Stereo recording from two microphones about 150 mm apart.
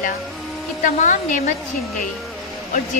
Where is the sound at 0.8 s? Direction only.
65° left (ahead or behind).